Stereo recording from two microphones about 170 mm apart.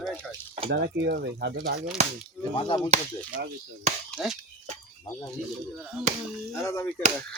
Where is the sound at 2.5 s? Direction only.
30° left (ahead or behind).